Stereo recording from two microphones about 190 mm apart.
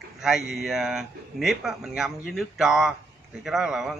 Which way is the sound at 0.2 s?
Centre (ahead or behind).